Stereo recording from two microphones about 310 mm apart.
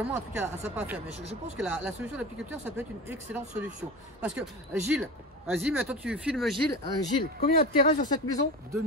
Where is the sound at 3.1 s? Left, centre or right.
Centre.